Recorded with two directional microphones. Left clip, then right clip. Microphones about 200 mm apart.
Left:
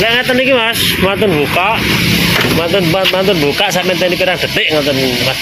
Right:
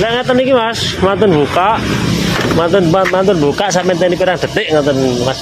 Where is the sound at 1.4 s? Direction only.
30° right (ahead or behind).